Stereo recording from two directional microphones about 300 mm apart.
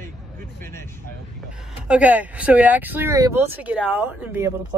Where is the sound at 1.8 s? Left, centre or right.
Centre.